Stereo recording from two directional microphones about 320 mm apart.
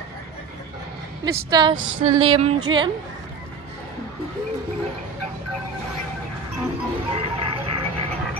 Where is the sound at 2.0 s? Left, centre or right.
Centre.